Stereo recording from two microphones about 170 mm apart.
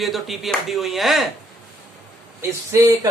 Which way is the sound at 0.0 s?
Centre (ahead or behind).